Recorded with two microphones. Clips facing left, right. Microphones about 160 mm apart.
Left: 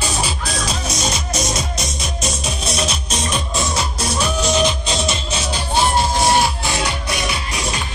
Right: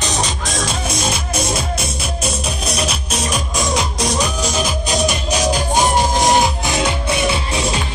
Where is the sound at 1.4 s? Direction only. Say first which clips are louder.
Right 2 dB; 30° right (ahead or behind).